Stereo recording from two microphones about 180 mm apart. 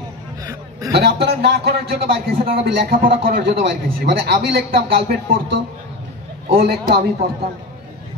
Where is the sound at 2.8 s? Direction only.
55° right (ahead or behind).